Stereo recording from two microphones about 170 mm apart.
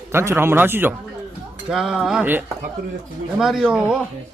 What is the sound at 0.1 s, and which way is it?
A man's voice, 15° right (ahead or behind).